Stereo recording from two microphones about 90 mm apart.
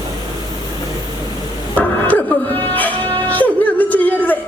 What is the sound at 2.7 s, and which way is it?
Music, 20° left (ahead or behind).